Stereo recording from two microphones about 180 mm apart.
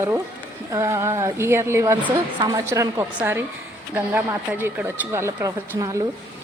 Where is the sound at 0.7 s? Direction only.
15° right (ahead or behind).